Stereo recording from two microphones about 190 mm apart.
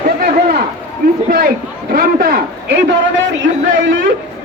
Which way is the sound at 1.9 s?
50° right (ahead or behind).